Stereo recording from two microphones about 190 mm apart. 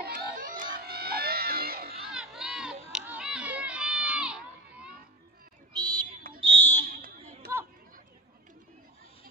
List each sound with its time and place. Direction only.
0.0 s music: 50° right (ahead or behind)
2.0 s crowd: 5° right (ahead or behind)
5.7 s a sound: 20° right (ahead or behind)
6.4 s fire alarm: 10° left (ahead or behind)
6.8 s fire alarm: 50° right (ahead or behind)
7.4 s chatter: 55° right (ahead or behind)